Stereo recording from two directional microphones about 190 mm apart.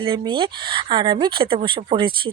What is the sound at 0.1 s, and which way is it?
Speech, 25° right (ahead or behind).